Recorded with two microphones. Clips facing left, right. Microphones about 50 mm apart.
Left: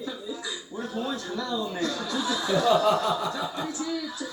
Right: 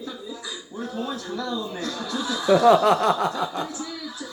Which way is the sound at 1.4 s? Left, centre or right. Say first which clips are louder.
Left 2 dB; left.